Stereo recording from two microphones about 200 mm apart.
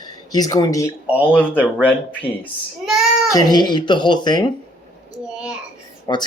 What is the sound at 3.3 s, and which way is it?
Speech, 20° left (ahead or behind).